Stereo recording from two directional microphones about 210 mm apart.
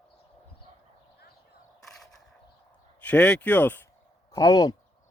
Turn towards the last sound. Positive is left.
turn(degrees=15)  # may be behind; listen again after turning